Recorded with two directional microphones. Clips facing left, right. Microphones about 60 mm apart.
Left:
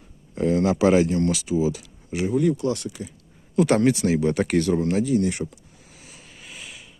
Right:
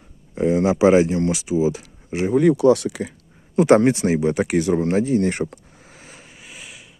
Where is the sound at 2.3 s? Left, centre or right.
Right.